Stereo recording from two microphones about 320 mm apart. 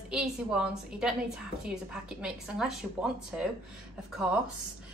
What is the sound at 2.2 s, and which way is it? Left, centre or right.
Speech, centre.